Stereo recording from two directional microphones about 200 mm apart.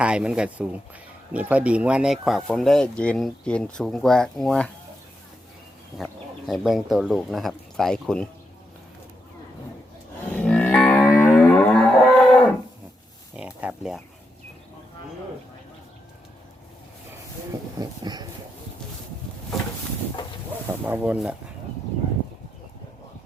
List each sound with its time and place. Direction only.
0.0 s speech: 5° right (ahead or behind)
6.0 s speech: centre (ahead or behind)
10.3 s livestock: 5° left (ahead or behind)
13.3 s a sound: 5° right (ahead or behind)
17.5 s speech: 20° right (ahead or behind)
20.8 s speech: 10° right (ahead or behind)